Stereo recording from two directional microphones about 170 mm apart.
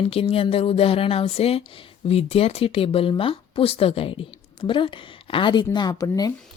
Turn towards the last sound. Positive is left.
turn(degrees=20)  # may be behind; listen again after turning